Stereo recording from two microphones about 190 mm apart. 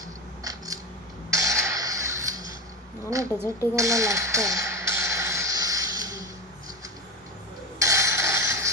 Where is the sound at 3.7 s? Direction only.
15° right (ahead or behind).